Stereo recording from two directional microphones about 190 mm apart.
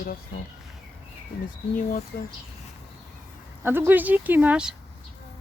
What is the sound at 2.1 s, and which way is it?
Speech, 50° left (ahead or behind).